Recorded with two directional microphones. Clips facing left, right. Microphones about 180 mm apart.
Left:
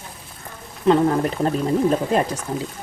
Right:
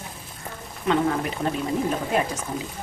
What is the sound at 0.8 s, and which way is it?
Speech, 35° left (ahead or behind).